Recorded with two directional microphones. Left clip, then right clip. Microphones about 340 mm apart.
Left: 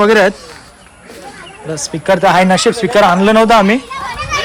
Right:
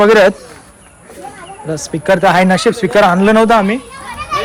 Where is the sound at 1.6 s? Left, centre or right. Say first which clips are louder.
Even; centre.